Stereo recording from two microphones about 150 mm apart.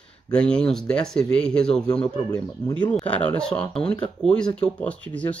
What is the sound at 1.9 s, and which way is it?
Speech, 25° left (ahead or behind).